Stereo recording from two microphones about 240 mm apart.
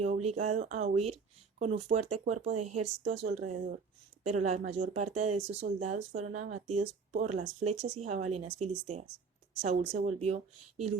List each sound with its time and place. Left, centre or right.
0.0 s speech: right